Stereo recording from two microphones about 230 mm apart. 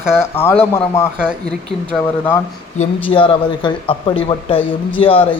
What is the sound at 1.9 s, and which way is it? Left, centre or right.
Speech, centre.